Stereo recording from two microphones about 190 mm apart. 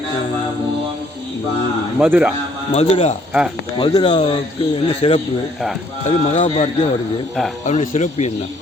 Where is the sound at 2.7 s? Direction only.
35° left (ahead or behind).